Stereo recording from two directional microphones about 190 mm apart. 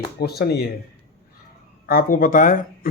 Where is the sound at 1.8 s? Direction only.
50° left (ahead or behind).